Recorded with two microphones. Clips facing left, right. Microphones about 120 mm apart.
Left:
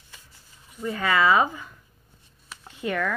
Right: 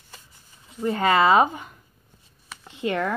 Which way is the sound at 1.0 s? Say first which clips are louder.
Right 3 dB; 65° right (ahead or behind).